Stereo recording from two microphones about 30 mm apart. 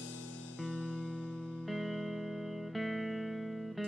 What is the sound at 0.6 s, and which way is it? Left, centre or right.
Music, left.